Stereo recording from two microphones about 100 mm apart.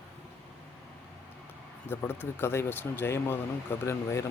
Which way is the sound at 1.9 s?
20° left (ahead or behind).